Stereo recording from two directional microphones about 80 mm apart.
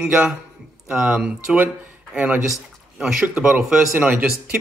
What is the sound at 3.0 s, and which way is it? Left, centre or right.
Speech, centre.